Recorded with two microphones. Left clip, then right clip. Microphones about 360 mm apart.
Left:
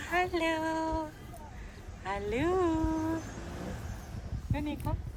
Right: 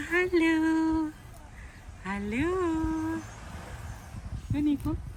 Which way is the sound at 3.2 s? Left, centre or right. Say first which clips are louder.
Left 2 dB; centre.